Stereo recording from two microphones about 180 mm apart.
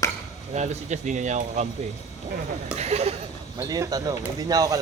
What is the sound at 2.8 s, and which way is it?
Speech, 35° right (ahead or behind).